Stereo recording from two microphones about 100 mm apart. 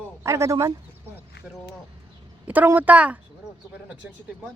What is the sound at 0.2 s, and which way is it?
Speech, 30° right (ahead or behind).